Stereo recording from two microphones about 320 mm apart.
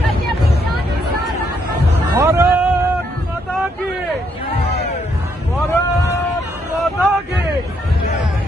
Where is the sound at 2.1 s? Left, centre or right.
Centre.